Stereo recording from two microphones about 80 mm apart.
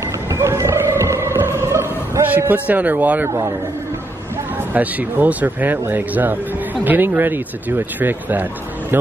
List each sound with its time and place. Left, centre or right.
0.3 s music: right
2.2 s speech: right
4.7 s speech: right